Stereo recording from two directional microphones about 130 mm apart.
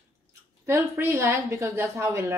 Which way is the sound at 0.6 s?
20° right (ahead or behind).